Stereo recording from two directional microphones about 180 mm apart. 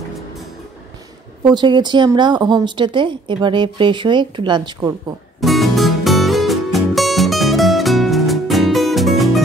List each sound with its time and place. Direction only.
1.4 s a woman's voice: 25° right (ahead or behind)
5.4 s music: centre (ahead or behind)